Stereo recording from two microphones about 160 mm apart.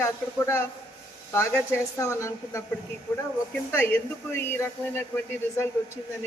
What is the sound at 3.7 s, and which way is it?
Speech, 15° left (ahead or behind).